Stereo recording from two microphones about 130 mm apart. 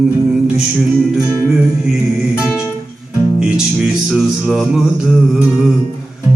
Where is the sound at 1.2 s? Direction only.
20° right (ahead or behind).